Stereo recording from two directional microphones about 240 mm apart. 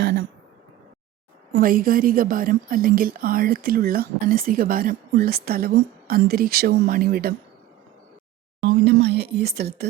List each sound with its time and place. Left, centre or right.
0.0 s a sound: right
1.5 s a woman's voice: right
8.6 s speech: right